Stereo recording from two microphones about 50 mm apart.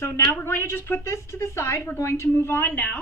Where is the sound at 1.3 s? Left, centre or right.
Left.